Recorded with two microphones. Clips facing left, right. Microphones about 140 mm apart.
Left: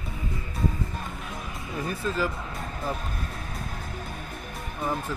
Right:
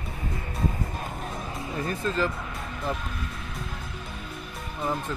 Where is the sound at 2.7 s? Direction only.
40° left (ahead or behind).